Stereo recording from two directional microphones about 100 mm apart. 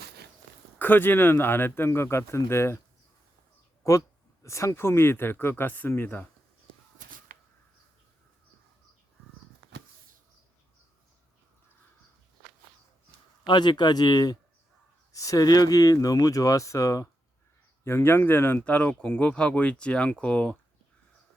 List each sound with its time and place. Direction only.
0.8 s speech: 20° left (ahead or behind)
4.4 s speech: 30° left (ahead or behind)
13.4 s speech: 45° left (ahead or behind); by 20.6 s 15° left (ahead or behind)